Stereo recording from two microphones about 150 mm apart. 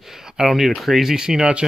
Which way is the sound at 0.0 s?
5° right (ahead or behind).